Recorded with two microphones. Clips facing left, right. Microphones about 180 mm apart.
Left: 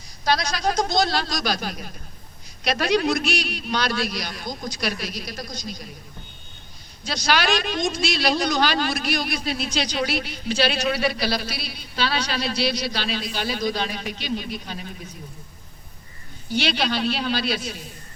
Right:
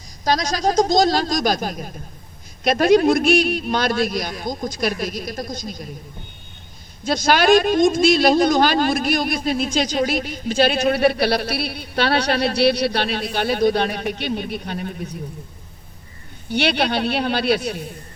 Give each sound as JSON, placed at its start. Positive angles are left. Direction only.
{"t": 0.3, "sound": "a man's voice", "side_deg": -40}
{"t": 7.0, "sound": "a man's voice", "side_deg": -50}
{"t": 16.5, "sound": "a man's voice", "side_deg": -60}